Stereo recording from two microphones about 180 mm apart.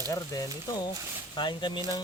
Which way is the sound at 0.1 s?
20° left (ahead or behind).